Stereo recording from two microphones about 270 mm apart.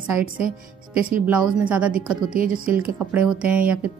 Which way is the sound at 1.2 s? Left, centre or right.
Centre.